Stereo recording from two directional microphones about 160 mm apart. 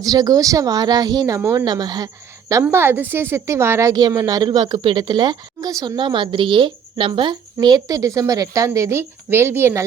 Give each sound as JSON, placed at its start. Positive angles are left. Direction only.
{"t": 0.0, "sound": "a woman's voice", "side_deg": -25}
{"t": 2.6, "sound": "a woman's voice", "side_deg": -15}